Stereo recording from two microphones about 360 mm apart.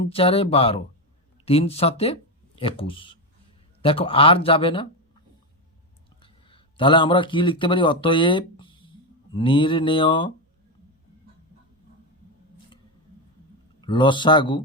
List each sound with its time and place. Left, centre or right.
0.0 s speech: centre
6.2 s speech: centre
13.8 s speech: centre